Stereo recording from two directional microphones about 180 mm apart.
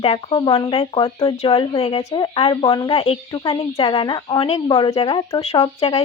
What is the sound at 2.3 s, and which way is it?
A woman's voice, 30° left (ahead or behind).